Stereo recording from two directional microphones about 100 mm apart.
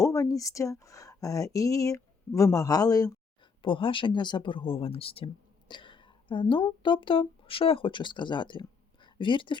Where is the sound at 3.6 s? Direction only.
60° left (ahead or behind).